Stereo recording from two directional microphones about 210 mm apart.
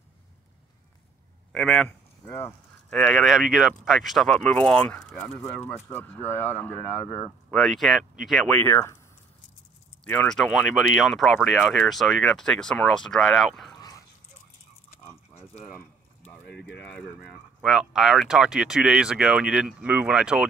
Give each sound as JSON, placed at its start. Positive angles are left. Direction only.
{"t": 1.5, "sound": "a man's voice", "side_deg": 0}
{"t": 2.2, "sound": "speech", "side_deg": 10}
{"t": 10.0, "sound": "speech", "side_deg": 5}
{"t": 13.7, "sound": "dog", "side_deg": 20}
{"t": 15.3, "sound": "a sound", "side_deg": 30}
{"t": 16.5, "sound": "speech", "side_deg": 55}
{"t": 16.8, "sound": "speech", "side_deg": 5}